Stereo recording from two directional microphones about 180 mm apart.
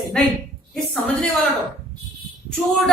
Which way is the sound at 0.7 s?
5° left (ahead or behind).